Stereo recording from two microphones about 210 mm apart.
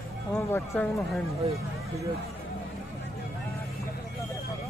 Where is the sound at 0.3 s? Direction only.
5° left (ahead or behind).